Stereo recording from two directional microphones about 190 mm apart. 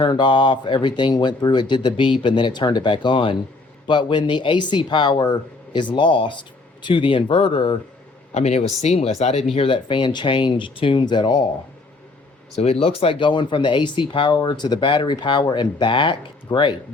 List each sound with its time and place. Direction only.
0.0 s speech: 25° left (ahead or behind)
12.5 s speech: 30° left (ahead or behind)